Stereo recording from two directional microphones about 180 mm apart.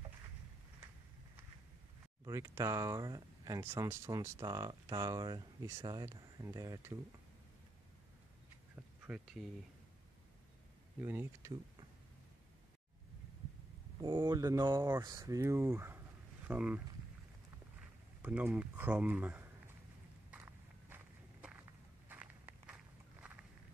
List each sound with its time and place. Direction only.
2.2 s speech: 15° right (ahead or behind)
9.0 s speech: 5° right (ahead or behind)
11.0 s speech: 15° right (ahead or behind)
13.9 s speech: 25° right (ahead or behind); by 16.8 s 10° right (ahead or behind)
17.7 s a sound: 10° right (ahead or behind)
20.2 s walk: 10° right (ahead or behind)